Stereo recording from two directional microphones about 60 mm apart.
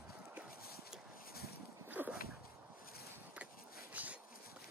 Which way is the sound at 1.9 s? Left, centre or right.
Right.